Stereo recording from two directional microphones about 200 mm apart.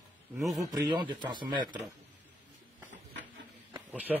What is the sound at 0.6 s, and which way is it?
Speech, 20° right (ahead or behind).